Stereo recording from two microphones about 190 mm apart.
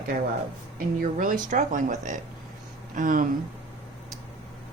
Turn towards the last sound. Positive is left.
turn(degrees=-45)  # may be behind; listen again after turning